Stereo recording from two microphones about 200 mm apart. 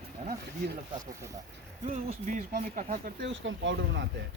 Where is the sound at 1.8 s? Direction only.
35° right (ahead or behind).